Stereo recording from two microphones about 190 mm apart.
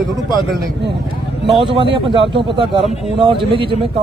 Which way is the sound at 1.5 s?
25° right (ahead or behind).